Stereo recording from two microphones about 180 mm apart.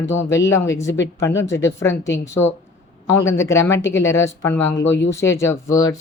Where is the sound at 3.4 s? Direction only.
15° left (ahead or behind).